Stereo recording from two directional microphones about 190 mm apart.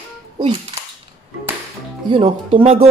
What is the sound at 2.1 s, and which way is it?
Speech, 30° right (ahead or behind).